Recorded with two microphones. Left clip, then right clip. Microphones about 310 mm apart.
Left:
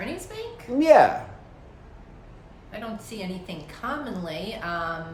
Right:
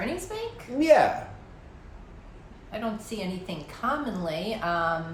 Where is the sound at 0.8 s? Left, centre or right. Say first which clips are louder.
Left 4 dB; centre.